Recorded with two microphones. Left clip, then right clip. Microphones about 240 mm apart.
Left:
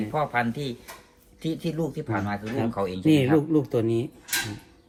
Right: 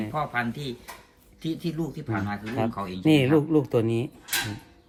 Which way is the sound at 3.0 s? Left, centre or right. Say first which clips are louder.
Right 1 dB; right.